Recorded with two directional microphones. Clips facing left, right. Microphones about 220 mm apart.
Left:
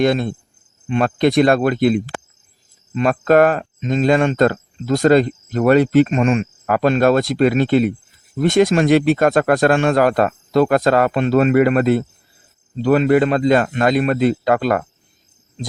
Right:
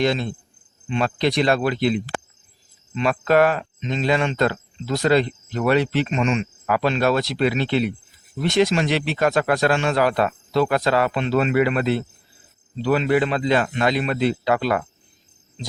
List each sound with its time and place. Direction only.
0.0 s speech: 50° left (ahead or behind)